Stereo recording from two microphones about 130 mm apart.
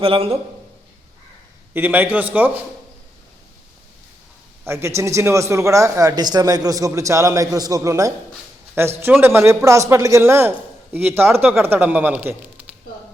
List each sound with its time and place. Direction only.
0.0 s a man's voice: 45° right (ahead or behind)
1.7 s speech: 15° right (ahead or behind)
4.6 s a man's voice: 20° right (ahead or behind)